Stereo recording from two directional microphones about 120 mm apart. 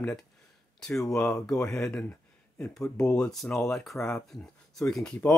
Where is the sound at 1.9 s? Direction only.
10° left (ahead or behind).